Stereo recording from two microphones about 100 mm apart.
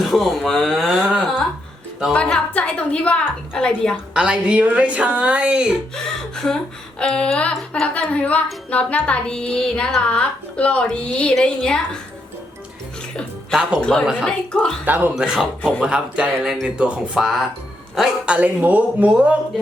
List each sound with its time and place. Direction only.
0.0 s speech: centre (ahead or behind)
2.1 s a woman's voice: 10° left (ahead or behind)
4.1 s speech: 10° right (ahead or behind)
6.3 s a woman's voice: 5° left (ahead or behind)
13.5 s speech: 5° right (ahead or behind)
14.3 s a woman's voice: 10° left (ahead or behind)
14.8 s speech: 20° right (ahead or behind)
15.1 s speech: 5° right (ahead or behind)